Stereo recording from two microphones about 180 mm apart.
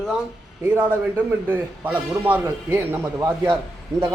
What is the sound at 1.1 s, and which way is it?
A man's voice, 10° right (ahead or behind).